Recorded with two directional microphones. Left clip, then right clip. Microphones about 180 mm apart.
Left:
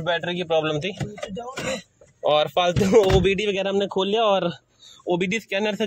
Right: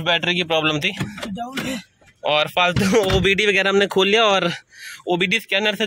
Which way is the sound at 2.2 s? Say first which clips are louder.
Right 1 dB; 15° left (ahead or behind).